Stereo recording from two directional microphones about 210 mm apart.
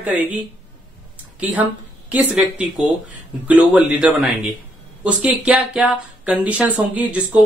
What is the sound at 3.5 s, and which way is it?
Speech, 5° right (ahead or behind).